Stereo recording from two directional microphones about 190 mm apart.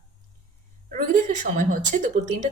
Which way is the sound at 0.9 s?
45° right (ahead or behind).